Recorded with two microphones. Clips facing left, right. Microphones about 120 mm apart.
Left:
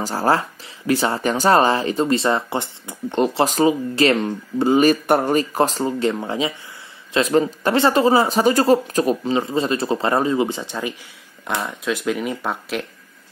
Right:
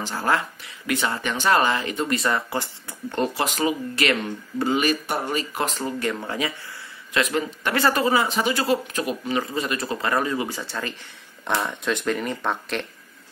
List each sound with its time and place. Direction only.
0.0 s speech: 35° left (ahead or behind); by 3.4 s 20° left (ahead or behind)
3.4 s speech: 30° left (ahead or behind)
5.0 s speech: 50° left (ahead or behind); by 6.5 s 20° left (ahead or behind)
7.2 s speech: 30° left (ahead or behind); by 11.0 s 15° left (ahead or behind)
11.6 s speech: centre (ahead or behind)